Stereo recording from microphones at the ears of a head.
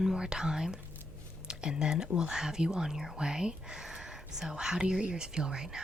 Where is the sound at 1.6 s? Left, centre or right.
Left.